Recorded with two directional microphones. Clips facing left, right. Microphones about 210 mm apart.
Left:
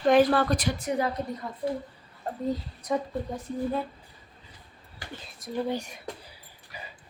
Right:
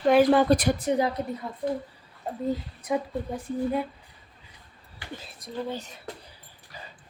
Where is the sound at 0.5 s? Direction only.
55° right (ahead or behind).